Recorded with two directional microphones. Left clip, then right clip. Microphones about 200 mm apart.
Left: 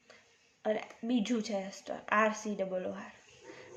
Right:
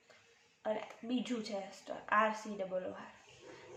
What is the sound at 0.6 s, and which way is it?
Speech, 55° left (ahead or behind).